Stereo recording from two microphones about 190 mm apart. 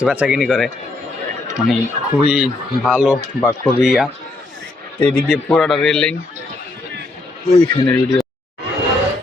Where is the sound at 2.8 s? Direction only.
5° right (ahead or behind).